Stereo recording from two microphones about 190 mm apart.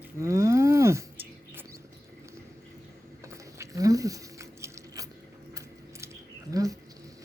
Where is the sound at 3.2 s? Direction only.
15° right (ahead or behind).